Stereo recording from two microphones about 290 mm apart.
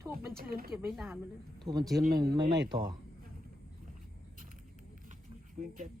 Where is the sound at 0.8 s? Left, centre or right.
Centre.